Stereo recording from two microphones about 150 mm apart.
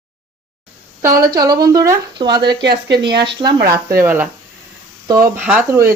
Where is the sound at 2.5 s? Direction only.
90° right.